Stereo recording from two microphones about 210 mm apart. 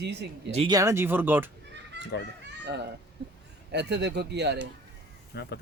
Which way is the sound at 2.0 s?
55° right (ahead or behind).